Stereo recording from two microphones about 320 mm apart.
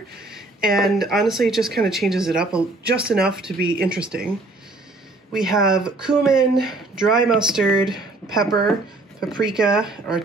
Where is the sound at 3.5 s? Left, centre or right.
Right.